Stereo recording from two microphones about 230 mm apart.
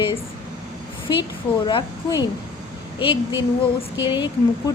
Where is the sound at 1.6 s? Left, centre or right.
Left.